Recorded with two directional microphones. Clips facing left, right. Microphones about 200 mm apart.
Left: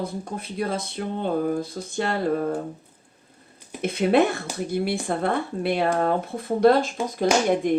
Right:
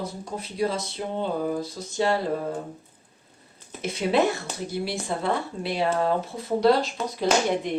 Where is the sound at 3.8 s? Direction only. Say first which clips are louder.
Left 3 dB; 55° left (ahead or behind).